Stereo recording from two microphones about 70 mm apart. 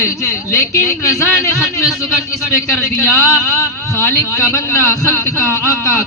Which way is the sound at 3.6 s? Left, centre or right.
Left.